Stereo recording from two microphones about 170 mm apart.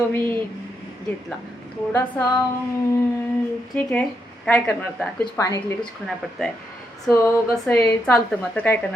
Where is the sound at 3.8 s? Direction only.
10° left (ahead or behind).